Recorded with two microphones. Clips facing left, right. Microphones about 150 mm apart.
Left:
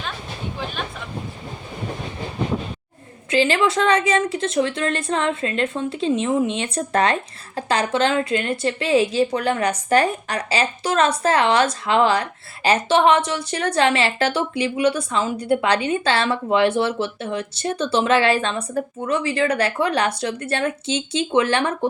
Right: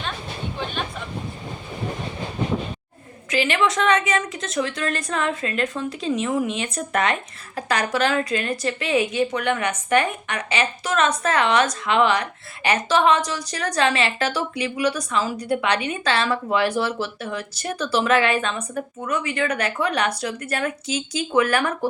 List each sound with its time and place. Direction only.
3.2 s a woman's voice: 30° left (ahead or behind)